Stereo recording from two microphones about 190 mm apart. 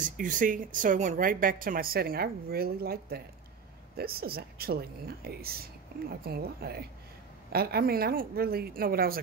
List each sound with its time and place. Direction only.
0.0 s a woman's voice: 45° right (ahead or behind)